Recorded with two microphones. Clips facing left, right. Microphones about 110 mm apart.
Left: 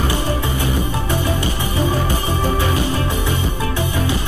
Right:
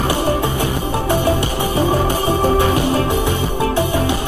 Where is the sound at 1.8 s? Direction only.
55° right (ahead or behind).